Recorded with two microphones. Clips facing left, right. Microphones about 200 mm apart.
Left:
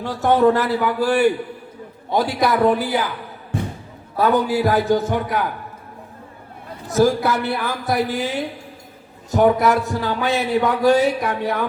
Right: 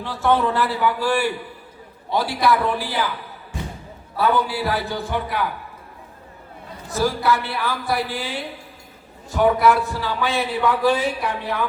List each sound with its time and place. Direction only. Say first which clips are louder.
0.0 s a man's voice: left 5 dB; 45° left (ahead or behind)
4.2 s a man's voice: left 4 dB; 45° left (ahead or behind)
7.0 s a man's voice: left 4 dB; 45° left (ahead or behind)